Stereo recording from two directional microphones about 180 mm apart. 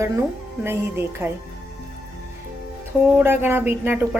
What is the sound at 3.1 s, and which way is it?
Speech, 10° right (ahead or behind).